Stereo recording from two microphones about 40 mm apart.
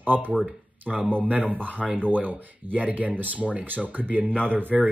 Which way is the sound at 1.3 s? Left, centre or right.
Right.